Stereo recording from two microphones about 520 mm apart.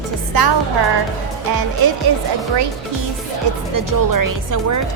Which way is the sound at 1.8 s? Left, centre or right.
Right.